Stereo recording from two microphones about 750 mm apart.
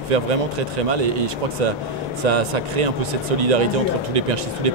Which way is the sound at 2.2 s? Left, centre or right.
Right.